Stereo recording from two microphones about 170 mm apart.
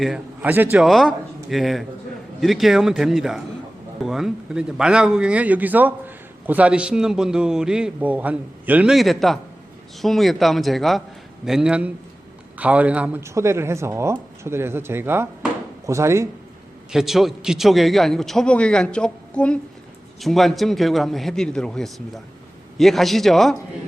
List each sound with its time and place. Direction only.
0.0 s a man's voice: 5° right (ahead or behind)
16.9 s a man's voice: centre (ahead or behind)